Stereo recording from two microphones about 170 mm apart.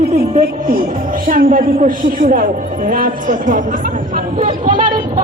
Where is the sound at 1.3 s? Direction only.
55° right (ahead or behind).